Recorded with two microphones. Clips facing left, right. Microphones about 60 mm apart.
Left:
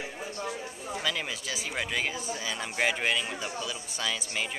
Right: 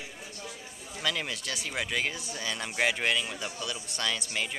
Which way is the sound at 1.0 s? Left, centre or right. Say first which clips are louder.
Right 2 dB; centre.